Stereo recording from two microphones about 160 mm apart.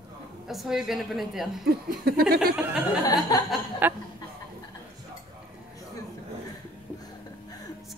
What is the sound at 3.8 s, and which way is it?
Chuckle, 10° right (ahead or behind).